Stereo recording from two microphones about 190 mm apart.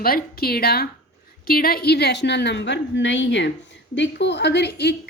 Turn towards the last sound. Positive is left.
turn(degrees=60)  # may be behind; listen again after turning